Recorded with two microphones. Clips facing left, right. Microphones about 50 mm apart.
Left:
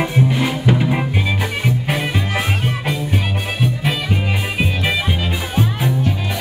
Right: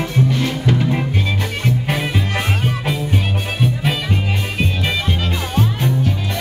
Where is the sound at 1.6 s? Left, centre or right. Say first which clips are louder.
Right 2 dB; centre.